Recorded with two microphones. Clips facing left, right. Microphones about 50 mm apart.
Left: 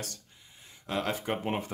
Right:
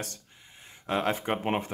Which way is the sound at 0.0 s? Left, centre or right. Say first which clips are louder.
Right 3 dB; right.